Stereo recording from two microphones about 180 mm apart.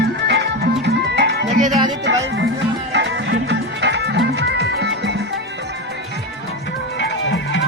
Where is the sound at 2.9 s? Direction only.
75° right (ahead or behind).